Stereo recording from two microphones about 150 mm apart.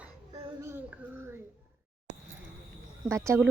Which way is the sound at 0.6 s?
15° right (ahead or behind).